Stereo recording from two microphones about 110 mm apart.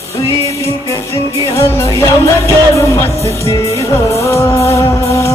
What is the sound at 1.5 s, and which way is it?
Music, 25° left (ahead or behind).